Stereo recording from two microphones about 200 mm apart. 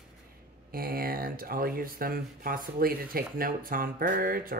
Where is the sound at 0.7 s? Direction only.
50° right (ahead or behind).